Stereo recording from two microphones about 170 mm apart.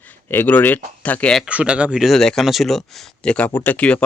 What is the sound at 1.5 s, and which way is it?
Speech, 5° right (ahead or behind).